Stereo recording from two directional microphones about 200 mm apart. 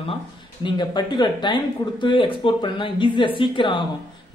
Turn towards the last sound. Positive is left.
turn(degrees=25)  # may be behind; listen again after turning